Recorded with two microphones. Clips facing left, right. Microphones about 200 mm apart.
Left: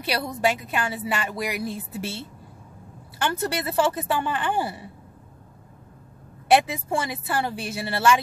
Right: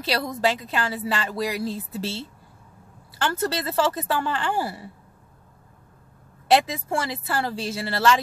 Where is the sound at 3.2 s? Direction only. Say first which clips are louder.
Right 1 dB; 15° left (ahead or behind).